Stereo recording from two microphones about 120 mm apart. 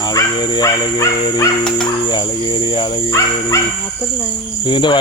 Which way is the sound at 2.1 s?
40° left (ahead or behind).